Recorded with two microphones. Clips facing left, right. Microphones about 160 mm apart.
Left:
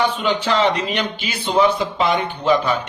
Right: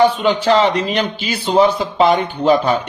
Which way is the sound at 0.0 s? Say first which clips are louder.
Right 6 dB; 35° right (ahead or behind).